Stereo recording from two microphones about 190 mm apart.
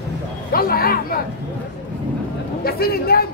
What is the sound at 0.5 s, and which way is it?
Speech, 50° left (ahead or behind).